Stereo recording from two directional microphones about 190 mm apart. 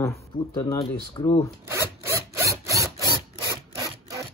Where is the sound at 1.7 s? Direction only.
15° right (ahead or behind).